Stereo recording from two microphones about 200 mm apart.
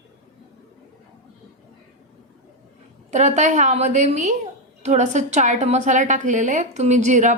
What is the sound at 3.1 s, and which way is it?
A woman's voice, 35° right (ahead or behind).